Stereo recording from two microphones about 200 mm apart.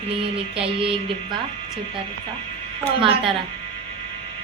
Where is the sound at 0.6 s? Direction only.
25° right (ahead or behind).